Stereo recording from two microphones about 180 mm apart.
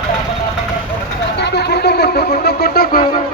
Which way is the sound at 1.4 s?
65° left (ahead or behind).